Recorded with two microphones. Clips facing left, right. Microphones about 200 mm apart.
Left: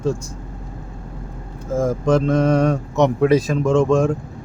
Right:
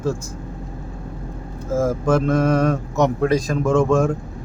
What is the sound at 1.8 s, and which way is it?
Speech, 5° right (ahead or behind).